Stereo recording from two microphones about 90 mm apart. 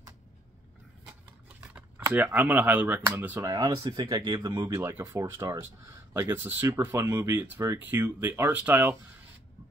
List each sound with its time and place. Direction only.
2.1 s speech: 20° right (ahead or behind)
3.4 s speech: 40° right (ahead or behind)
3.8 s speech: 55° right (ahead or behind); by 8.9 s 20° right (ahead or behind)